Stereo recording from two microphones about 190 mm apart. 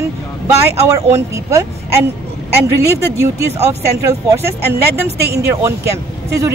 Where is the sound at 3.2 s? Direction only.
15° right (ahead or behind).